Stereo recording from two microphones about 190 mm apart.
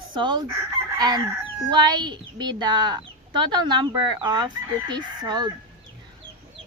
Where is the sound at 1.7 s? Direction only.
20° right (ahead or behind).